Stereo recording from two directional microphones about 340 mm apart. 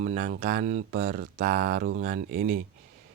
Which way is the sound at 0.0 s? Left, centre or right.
Right.